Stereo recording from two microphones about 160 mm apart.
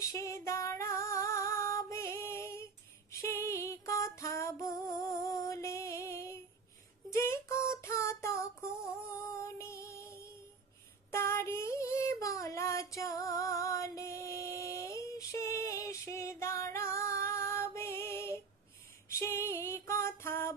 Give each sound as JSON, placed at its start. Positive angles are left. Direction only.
{"t": 0.0, "sound": "female singing", "side_deg": 20}
{"t": 3.1, "sound": "music", "side_deg": 15}
{"t": 7.2, "sound": "female singing", "side_deg": 15}
{"t": 9.3, "sound": "music", "side_deg": 20}
{"t": 11.1, "sound": "child singing", "side_deg": 15}
{"t": 19.0, "sound": "female singing", "side_deg": 20}